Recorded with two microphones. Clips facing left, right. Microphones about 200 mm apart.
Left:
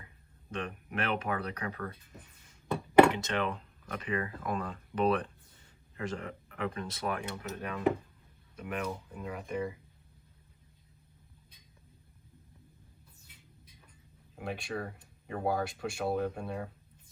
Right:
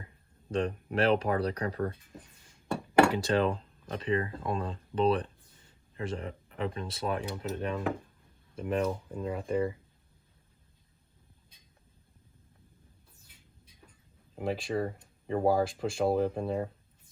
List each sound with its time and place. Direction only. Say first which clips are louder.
0.5 s speech: right 7 dB; 30° right (ahead or behind)
3.1 s speech: right 5 dB; 35° right (ahead or behind)
14.3 s speech: right 6 dB; 25° right (ahead or behind)